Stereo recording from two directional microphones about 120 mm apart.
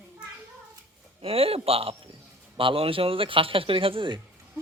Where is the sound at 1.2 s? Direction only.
55° right (ahead or behind).